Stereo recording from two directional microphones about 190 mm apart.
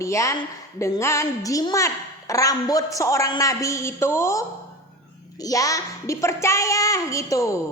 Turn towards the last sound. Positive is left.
turn(degrees=15)  # may be behind; listen again after turning